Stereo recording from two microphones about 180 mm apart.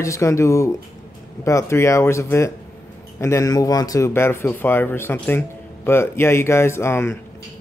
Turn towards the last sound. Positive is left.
turn(degrees=15)  # may be behind; listen again after turning